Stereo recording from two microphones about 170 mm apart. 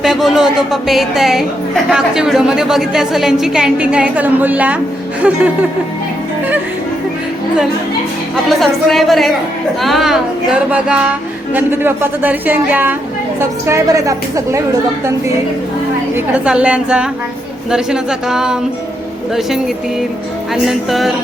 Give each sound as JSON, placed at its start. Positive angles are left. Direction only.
{"t": 0.0, "sound": "a woman's voice", "side_deg": 0}
{"t": 8.4, "sound": "a woman's voice", "side_deg": 0}
{"t": 16.1, "sound": "a woman's voice", "side_deg": -5}
{"t": 20.7, "sound": "a woman's voice", "side_deg": 0}